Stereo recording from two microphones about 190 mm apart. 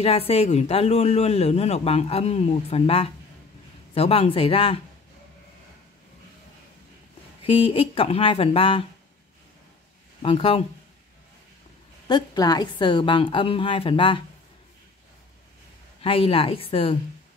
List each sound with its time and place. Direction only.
0.0 s a man's voice: 30° left (ahead or behind)
7.4 s a woman's voice: 30° left (ahead or behind)
10.2 s a woman's voice: 30° left (ahead or behind)
12.1 s a woman's voice: 20° left (ahead or behind)
16.0 s a woman's voice: 30° left (ahead or behind)